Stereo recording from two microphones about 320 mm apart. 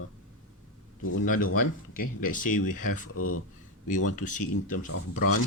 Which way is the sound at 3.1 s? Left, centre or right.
Left.